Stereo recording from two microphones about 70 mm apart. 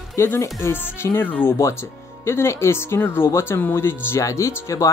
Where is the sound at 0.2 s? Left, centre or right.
Left.